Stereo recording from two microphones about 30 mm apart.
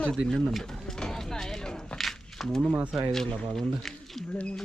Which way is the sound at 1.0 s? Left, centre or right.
Centre.